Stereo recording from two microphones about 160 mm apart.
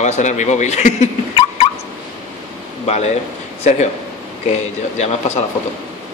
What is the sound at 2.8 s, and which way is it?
Speech, 45° left (ahead or behind).